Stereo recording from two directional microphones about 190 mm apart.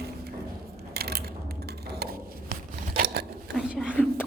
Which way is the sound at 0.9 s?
55° right (ahead or behind).